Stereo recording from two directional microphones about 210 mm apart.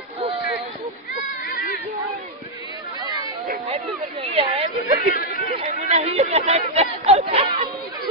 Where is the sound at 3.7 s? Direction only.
30° right (ahead or behind).